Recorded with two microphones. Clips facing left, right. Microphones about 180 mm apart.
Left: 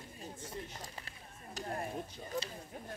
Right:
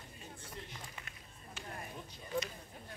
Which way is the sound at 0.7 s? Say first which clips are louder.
Left 2 dB; 35° left (ahead or behind).